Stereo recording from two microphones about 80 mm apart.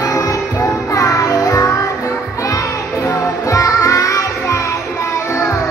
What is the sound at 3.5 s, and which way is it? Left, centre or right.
Music, left.